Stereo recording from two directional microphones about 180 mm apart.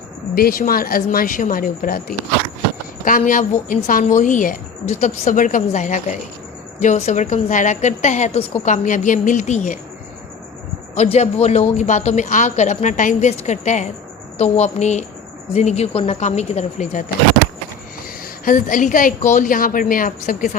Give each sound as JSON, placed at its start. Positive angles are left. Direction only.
{"t": 0.3, "sound": "a woman's voice", "side_deg": 55}
{"t": 10.9, "sound": "a woman's voice", "side_deg": 40}
{"t": 18.4, "sound": "a woman's voice", "side_deg": 45}